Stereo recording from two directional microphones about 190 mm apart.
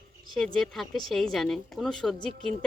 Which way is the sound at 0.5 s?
Centre (ahead or behind).